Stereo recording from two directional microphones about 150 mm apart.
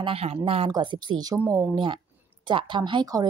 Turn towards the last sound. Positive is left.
turn(degrees=-25)  # may be behind; listen again after turning